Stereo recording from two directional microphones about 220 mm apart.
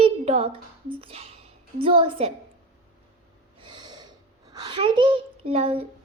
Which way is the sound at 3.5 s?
20° right (ahead or behind).